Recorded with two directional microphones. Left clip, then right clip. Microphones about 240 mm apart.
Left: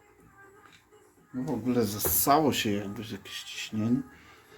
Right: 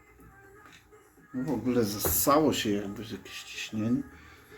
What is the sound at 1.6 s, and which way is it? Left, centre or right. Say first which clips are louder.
Speech: even; left.